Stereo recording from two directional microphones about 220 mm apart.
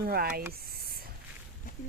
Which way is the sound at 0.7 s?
45° right (ahead or behind).